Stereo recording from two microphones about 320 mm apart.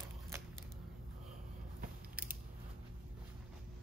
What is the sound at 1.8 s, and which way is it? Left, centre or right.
Biting, right.